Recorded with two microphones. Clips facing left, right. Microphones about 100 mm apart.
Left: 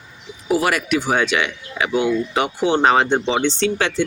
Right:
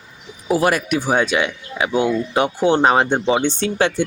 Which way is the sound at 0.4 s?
35° right (ahead or behind).